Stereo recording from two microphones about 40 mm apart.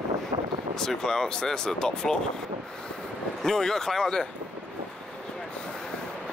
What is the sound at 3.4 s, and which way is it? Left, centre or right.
Speech, centre.